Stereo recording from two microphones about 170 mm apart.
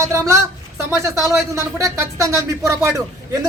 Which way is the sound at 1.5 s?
20° right (ahead or behind).